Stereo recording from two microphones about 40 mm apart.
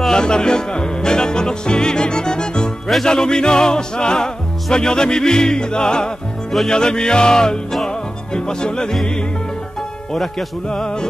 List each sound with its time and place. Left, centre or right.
0.1 s music: centre
10.7 s music: centre